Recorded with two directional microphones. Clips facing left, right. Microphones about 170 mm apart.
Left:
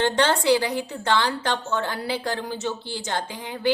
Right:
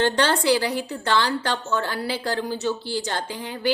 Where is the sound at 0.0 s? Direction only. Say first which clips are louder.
Even; 20° left (ahead or behind).